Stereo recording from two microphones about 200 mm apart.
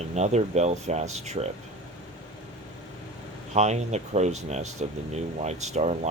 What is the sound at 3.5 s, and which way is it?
Speech, 35° right (ahead or behind).